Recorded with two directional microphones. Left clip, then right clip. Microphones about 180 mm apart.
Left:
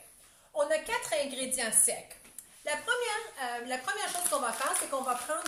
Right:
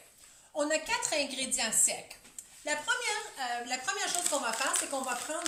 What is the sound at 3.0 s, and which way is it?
A woman's voice, 15° left (ahead or behind).